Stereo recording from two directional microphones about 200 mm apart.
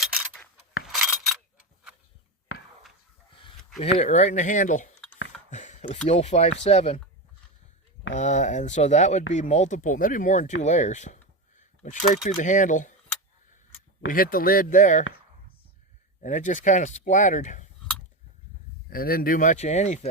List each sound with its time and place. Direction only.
0.0 s keys jangling: 5° right (ahead or behind)
0.9 s a sound: centre (ahead or behind)
3.9 s speech: 35° left (ahead or behind)
5.5 s a sound: 35° left (ahead or behind)
6.1 s speech: 35° left (ahead or behind)
8.1 s speech: 35° left (ahead or behind)
11.5 s a sound: 40° left (ahead or behind)
12.1 s speech: 40° left (ahead or behind)
14.1 s speech: 45° left (ahead or behind)
16.2 s speech: 40° left (ahead or behind)
18.9 s speech: 45° left (ahead or behind)